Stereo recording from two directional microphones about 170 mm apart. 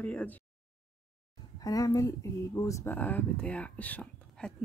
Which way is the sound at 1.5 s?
20° left (ahead or behind).